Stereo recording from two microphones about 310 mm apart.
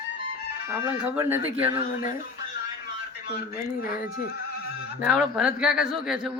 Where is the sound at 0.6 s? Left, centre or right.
Centre.